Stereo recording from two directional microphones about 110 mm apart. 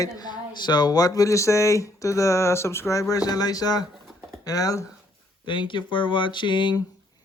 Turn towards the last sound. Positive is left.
turn(degrees=45)  # may be behind; listen again after turning